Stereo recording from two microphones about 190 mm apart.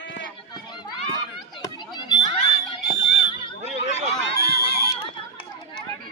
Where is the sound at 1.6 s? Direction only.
20° left (ahead or behind).